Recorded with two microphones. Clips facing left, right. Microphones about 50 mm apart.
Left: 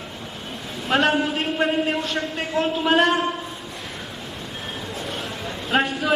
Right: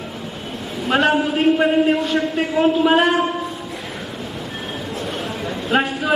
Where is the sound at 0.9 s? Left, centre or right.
Centre.